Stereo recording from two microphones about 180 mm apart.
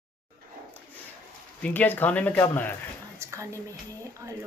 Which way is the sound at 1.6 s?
10° left (ahead or behind).